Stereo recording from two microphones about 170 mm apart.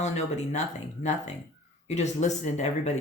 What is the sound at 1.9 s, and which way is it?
Speech, 40° left (ahead or behind).